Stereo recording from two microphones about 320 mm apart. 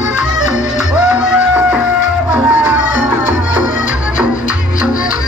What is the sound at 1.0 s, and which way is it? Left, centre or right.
Music, centre.